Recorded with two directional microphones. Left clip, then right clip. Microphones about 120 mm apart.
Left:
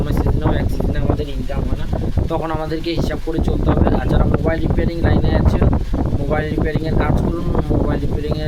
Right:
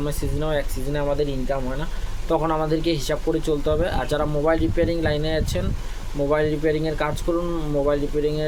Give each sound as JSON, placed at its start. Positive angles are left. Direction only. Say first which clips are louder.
{"t": 2.3, "sound": "speech", "louder": "right 2 dB", "side_deg": -15}